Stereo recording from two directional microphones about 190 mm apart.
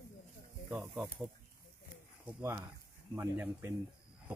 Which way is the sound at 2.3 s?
10° right (ahead or behind).